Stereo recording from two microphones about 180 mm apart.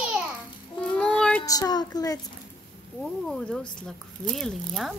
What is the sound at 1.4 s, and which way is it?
Child singing, 20° left (ahead or behind).